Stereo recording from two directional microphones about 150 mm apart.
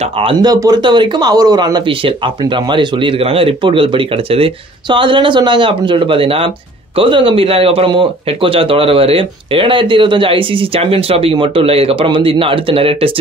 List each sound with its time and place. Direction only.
0.0 s speech: 35° right (ahead or behind)